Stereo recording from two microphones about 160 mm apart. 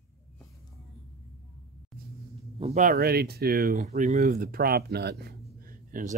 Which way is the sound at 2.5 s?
40° right (ahead or behind).